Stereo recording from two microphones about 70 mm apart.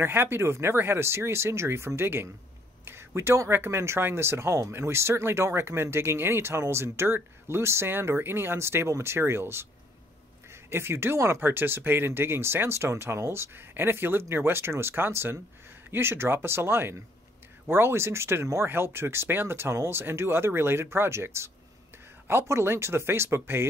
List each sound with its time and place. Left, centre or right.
0.0 s speech: right
2.8 s a sound: right
3.2 s speech: right